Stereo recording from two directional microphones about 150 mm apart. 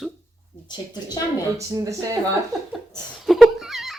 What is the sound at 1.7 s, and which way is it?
Speech, 20° right (ahead or behind).